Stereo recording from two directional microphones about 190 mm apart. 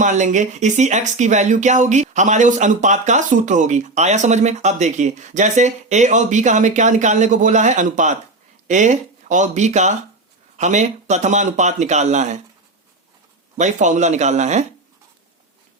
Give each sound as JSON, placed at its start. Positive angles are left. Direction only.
{"t": 0.0, "sound": "speech", "side_deg": -40}
{"t": 13.6, "sound": "speech", "side_deg": -40}